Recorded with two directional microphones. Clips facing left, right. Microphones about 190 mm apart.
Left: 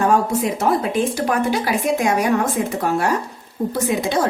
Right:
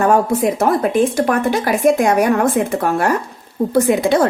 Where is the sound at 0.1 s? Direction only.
55° right (ahead or behind).